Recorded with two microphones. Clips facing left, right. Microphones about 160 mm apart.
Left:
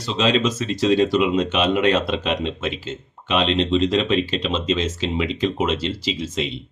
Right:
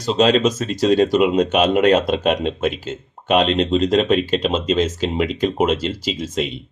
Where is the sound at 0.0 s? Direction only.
45° right (ahead or behind).